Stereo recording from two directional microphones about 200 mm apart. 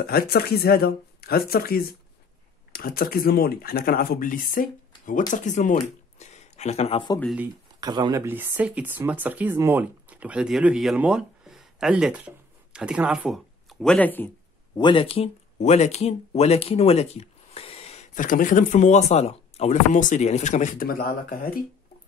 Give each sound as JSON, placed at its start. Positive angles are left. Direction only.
{"t": 0.0, "sound": "speech", "side_deg": 50}
{"t": 7.8, "sound": "speech", "side_deg": -20}
{"t": 14.8, "sound": "speech", "side_deg": 25}